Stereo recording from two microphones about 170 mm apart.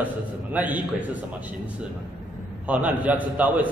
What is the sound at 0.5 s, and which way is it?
Speech, 10° right (ahead or behind).